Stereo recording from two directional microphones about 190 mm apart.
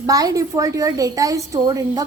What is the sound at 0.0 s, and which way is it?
A woman's voice, 20° right (ahead or behind).